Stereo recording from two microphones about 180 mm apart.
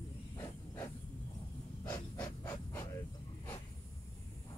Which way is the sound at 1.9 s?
10° left (ahead or behind).